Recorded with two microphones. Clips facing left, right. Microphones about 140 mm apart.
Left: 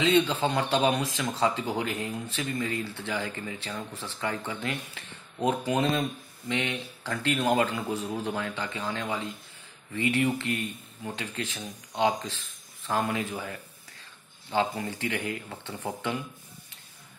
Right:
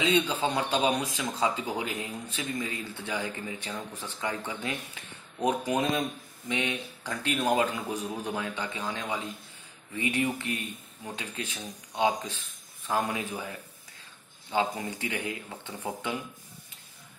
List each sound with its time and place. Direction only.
0.0 s speech: 10° right (ahead or behind)
14.5 s speech: 10° right (ahead or behind)